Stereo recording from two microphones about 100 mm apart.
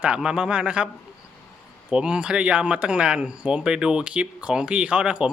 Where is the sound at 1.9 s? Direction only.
10° right (ahead or behind).